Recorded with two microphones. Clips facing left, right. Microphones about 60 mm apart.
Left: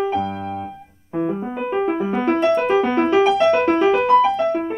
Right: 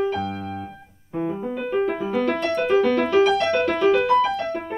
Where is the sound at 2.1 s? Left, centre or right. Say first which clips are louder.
Left 6 dB; left.